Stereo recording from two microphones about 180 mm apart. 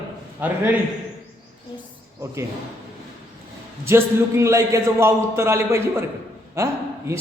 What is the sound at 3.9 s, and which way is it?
A man's voice, 15° right (ahead or behind).